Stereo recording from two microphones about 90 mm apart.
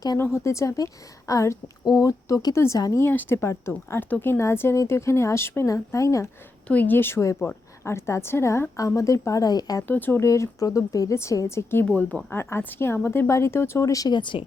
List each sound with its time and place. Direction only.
0.2 s speech: 30° left (ahead or behind)
1.8 s speech: 50° left (ahead or behind)
3.0 s a woman's voice: 25° left (ahead or behind)
6.7 s a woman's voice: 20° left (ahead or behind); by 9.8 s 45° left (ahead or behind)
9.8 s a woman's voice: 20° left (ahead or behind)
10.2 s speech: 35° left (ahead or behind)
11.9 s a woman's voice: 15° left (ahead or behind); by 14.1 s 40° left (ahead or behind)
14.1 s speech: 65° left (ahead or behind)